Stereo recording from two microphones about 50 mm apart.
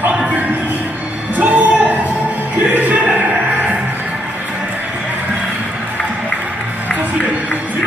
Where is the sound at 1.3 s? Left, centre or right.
Right.